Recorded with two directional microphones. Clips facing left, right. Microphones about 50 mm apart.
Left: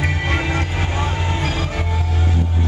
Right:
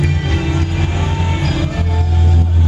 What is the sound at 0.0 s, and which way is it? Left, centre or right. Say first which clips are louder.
Music: right 2 dB; left.